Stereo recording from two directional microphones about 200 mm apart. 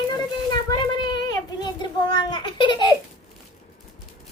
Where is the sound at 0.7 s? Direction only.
20° left (ahead or behind).